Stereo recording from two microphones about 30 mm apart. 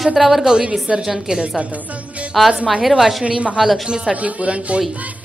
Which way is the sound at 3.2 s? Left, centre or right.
Right.